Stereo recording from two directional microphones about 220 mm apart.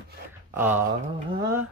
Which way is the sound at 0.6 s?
10° right (ahead or behind).